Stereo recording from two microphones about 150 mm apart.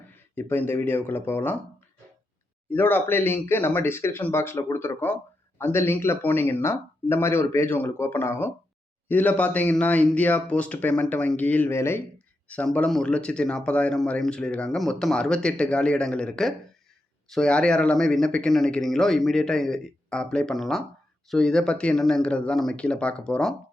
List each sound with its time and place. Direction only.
0.3 s speech: 15° left (ahead or behind)
2.6 s speech: 15° left (ahead or behind)